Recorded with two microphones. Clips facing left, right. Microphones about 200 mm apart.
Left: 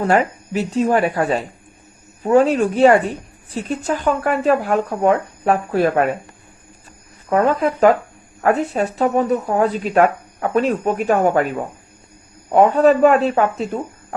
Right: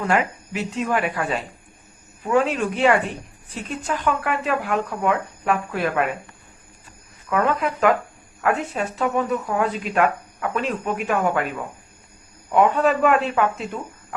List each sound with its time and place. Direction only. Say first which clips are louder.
0.0 s speech: left 5 dB; 35° left (ahead or behind)
7.3 s speech: left 5 dB; 35° left (ahead or behind)